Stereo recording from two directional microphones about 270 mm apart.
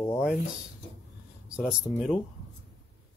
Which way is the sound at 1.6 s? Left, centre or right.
Centre.